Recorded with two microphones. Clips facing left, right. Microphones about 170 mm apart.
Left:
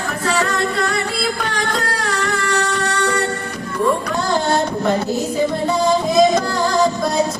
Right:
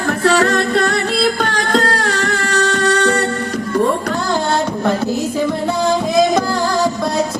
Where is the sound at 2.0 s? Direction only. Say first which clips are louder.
Right 2 dB; 65° right (ahead or behind).